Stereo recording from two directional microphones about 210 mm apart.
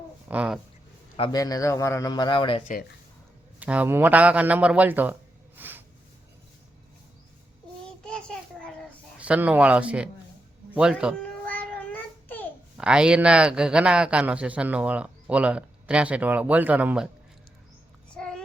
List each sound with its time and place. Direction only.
0.3 s a man's voice: 5° right (ahead or behind)
1.1 s a man's voice: 20° left (ahead or behind)
3.6 s a man's voice: 5° right (ahead or behind)
5.5 s a sound: 10° right (ahead or behind)
9.1 s a man's voice: 5° right (ahead or behind)
11.2 s child singing: 5° left (ahead or behind)
12.7 s a man's voice: 5° right (ahead or behind)
18.1 s a sound: 5° left (ahead or behind)